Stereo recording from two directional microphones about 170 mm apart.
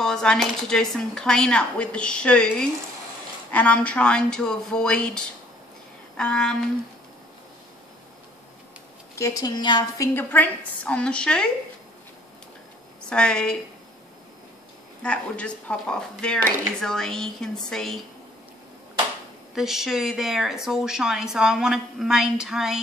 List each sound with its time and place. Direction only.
0.0 s speech: 5° left (ahead or behind)
9.1 s a woman's voice: 20° left (ahead or behind)
10.1 s a woman's voice: 10° left (ahead or behind)
13.1 s speech: 5° left (ahead or behind)
15.0 s speech: 5° left (ahead or behind)
19.5 s speech: centre (ahead or behind)